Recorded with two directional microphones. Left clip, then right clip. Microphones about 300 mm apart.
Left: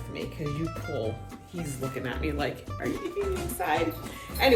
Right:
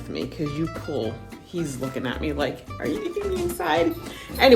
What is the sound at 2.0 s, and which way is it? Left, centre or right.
Speech, centre.